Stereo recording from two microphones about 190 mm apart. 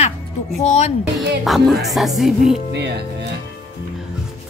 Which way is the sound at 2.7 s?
60° right (ahead or behind).